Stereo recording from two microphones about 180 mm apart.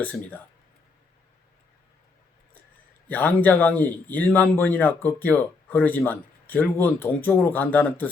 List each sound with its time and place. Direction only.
0.0 s a man's voice: 10° left (ahead or behind)
3.1 s a man's voice: 10° left (ahead or behind)